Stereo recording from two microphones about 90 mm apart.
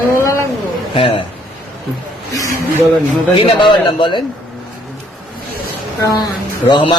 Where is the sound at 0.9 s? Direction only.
80° left.